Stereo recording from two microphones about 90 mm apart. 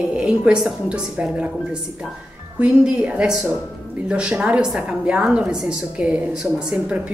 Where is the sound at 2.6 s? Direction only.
10° right (ahead or behind).